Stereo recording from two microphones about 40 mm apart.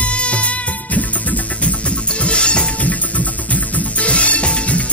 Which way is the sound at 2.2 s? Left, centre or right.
Left.